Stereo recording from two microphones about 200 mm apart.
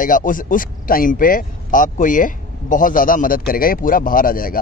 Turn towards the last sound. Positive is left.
turn(degrees=45)  # may be behind; listen again after turning